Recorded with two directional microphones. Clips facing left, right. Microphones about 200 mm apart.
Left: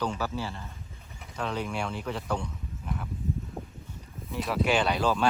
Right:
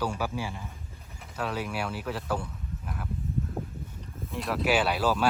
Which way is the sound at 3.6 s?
5° right (ahead or behind).